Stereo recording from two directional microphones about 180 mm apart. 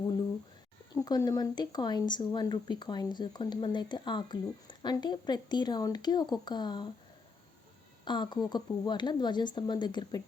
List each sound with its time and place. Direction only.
0.9 s speech: 20° left (ahead or behind)
8.0 s speech: 25° left (ahead or behind)